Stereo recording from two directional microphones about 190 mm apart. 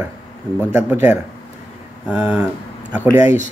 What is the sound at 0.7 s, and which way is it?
Speech, 10° right (ahead or behind).